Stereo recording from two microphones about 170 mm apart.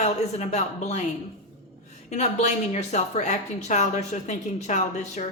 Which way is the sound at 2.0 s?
40° left (ahead or behind).